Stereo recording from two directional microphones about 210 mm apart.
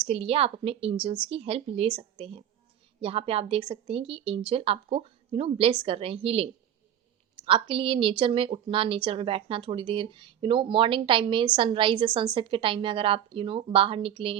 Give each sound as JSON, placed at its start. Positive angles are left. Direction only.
{"t": 0.0, "sound": "speech", "side_deg": -30}